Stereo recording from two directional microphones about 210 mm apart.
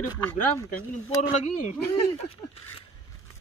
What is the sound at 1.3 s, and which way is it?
Speech, 35° left (ahead or behind).